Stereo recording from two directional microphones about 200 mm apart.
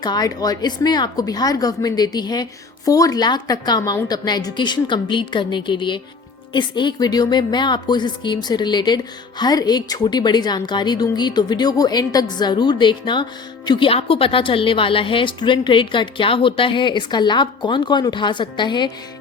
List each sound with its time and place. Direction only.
0.0 s speech: 20° left (ahead or behind)